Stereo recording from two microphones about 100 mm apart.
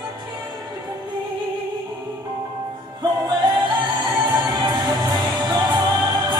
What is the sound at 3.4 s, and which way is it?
Music, 50° right (ahead or behind).